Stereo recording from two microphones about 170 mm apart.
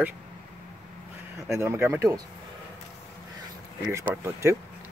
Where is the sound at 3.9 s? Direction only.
15° right (ahead or behind).